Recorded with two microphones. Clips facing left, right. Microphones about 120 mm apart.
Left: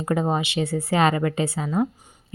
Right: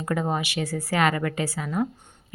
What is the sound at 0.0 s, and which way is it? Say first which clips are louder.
A woman's voice: left 3 dB; 25° left (ahead or behind).